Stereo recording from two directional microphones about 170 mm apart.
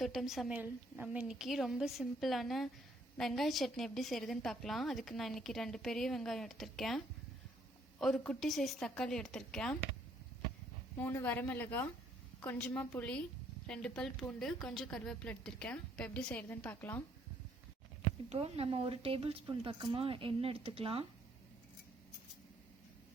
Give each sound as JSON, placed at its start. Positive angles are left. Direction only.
{"t": 0.0, "sound": "a woman's voice", "side_deg": 0}
{"t": 10.9, "sound": "a woman's voice", "side_deg": 10}
{"t": 18.3, "sound": "speech", "side_deg": -35}